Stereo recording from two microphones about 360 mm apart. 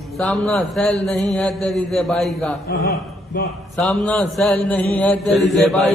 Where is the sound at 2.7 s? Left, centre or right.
Left.